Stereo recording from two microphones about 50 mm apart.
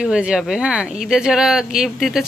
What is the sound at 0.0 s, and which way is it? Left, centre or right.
Speech, centre.